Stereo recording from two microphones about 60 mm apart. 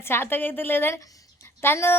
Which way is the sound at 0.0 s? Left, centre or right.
Left.